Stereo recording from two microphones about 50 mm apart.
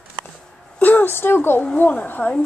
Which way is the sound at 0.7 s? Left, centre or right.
Left.